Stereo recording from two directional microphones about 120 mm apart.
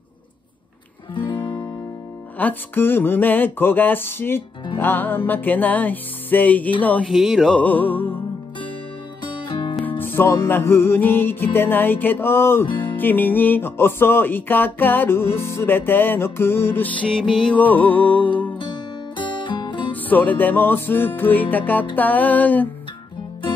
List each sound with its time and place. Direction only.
2.3 s music: 15° left (ahead or behind)
7.1 s music: centre (ahead or behind)
7.5 s music: 15° left (ahead or behind)
9.2 s music: 45° left (ahead or behind)
9.8 s music: 20° left (ahead or behind)
12.6 s music: 45° left (ahead or behind)
12.9 s music: 15° left (ahead or behind)
19.1 s music: 40° left (ahead or behind)
20.1 s music: 15° left (ahead or behind)